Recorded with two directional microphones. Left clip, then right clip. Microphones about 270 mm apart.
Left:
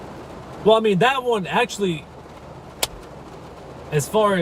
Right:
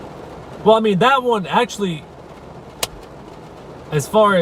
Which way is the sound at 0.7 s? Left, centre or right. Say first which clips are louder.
Right 3 dB; centre.